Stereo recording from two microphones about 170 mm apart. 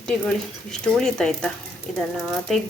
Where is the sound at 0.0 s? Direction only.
5° left (ahead or behind).